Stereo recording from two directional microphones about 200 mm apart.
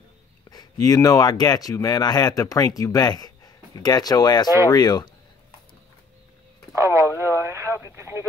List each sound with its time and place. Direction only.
0.5 s speech: 20° left (ahead or behind)
6.7 s radio: 15° right (ahead or behind)